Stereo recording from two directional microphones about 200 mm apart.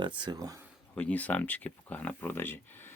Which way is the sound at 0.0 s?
25° right (ahead or behind).